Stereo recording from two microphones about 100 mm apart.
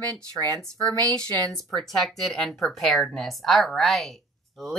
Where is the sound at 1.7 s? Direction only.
5° left (ahead or behind).